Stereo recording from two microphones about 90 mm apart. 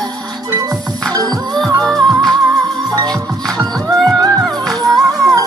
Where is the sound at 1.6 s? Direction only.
5° left (ahead or behind).